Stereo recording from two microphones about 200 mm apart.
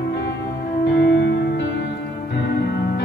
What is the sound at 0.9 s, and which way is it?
Music, 60° left (ahead or behind).